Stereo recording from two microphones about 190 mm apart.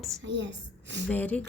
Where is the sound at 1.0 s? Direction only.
10° left (ahead or behind).